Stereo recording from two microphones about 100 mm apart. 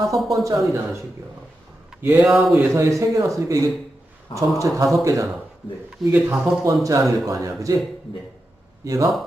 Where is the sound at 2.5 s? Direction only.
30° right (ahead or behind).